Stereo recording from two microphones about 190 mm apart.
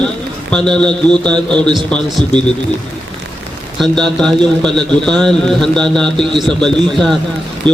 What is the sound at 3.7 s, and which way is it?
A man's voice, centre (ahead or behind).